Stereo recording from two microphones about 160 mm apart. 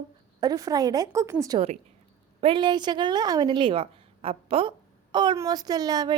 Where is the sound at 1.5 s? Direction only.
40° right (ahead or behind).